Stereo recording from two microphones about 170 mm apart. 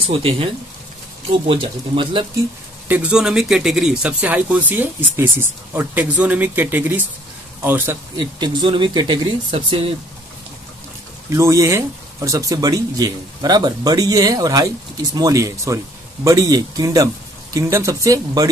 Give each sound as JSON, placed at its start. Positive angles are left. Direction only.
{"t": 0.0, "sound": "speech", "side_deg": -35}
{"t": 1.5, "sound": "speech", "side_deg": -30}
{"t": 2.9, "sound": "speech", "side_deg": -5}
{"t": 8.2, "sound": "speech", "side_deg": -25}
{"t": 11.2, "sound": "speech", "side_deg": -15}